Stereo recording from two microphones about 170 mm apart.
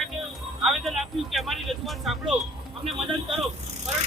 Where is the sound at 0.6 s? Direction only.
Centre (ahead or behind).